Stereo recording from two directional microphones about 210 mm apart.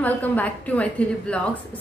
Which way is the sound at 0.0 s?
5° left (ahead or behind).